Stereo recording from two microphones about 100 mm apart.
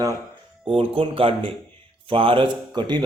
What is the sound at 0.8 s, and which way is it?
Speech, 65° right (ahead or behind).